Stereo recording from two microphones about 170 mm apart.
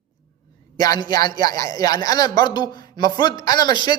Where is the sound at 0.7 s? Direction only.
20° left (ahead or behind).